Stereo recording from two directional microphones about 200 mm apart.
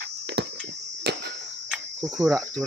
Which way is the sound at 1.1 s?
55° right (ahead or behind).